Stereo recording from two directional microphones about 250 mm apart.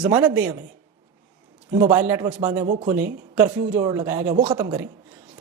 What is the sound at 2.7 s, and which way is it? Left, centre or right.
Speech, right.